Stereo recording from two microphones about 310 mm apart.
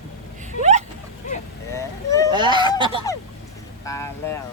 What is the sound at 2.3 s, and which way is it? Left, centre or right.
Speech, centre.